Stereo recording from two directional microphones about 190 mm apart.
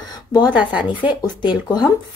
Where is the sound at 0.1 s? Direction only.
20° left (ahead or behind).